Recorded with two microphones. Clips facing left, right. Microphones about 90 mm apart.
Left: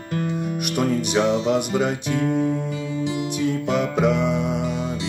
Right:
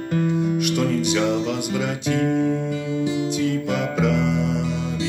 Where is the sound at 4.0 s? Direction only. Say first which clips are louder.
Right 1 dB; 15° left (ahead or behind).